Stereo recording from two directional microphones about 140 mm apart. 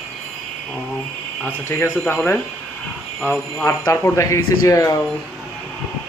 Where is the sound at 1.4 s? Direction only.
15° left (ahead or behind).